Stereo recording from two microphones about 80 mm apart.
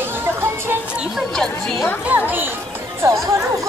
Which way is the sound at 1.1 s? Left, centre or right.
Centre.